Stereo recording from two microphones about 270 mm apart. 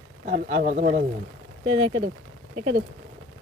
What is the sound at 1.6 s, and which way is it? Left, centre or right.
Speech, centre.